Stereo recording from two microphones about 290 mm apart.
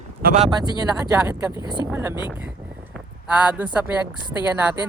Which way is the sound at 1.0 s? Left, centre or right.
Centre.